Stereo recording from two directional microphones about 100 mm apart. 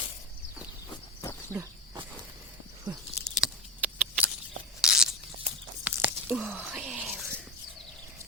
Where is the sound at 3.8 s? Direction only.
15° right (ahead or behind).